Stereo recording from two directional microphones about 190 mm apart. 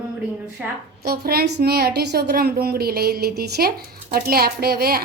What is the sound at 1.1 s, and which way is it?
A woman's voice, 55° right (ahead or behind).